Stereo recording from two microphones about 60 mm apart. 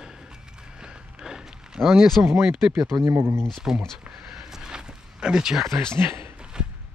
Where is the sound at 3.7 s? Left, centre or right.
Centre.